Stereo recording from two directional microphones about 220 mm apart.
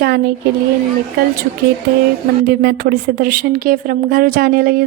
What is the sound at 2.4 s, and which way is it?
A woman's voice, 45° right (ahead or behind).